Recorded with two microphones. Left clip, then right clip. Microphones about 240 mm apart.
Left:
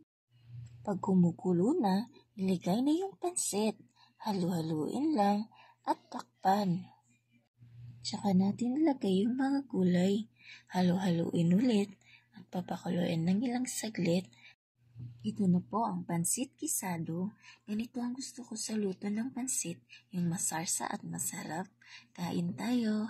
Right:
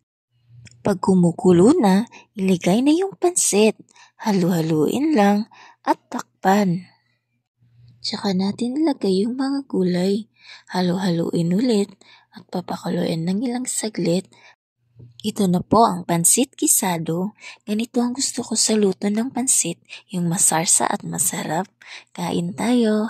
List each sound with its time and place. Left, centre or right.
1.0 s a woman's voice: right
8.0 s a woman's voice: right